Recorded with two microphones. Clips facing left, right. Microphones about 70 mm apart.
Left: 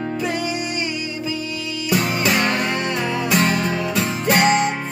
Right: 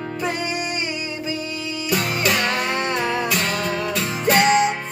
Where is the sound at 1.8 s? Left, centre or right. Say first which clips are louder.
Left 2 dB; centre.